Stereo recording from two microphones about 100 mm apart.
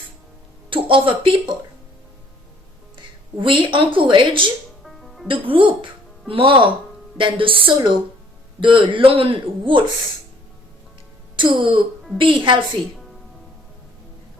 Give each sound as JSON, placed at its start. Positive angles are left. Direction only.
{"t": 0.7, "sound": "speech", "side_deg": -60}
{"t": 3.3, "sound": "speech", "side_deg": -55}
{"t": 4.8, "sound": "music", "side_deg": 0}
{"t": 5.3, "sound": "speech", "side_deg": -60}
{"t": 11.3, "sound": "speech", "side_deg": -55}